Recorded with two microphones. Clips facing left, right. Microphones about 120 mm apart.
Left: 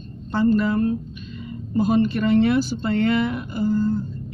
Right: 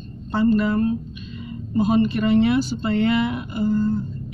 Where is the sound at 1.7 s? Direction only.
15° right (ahead or behind).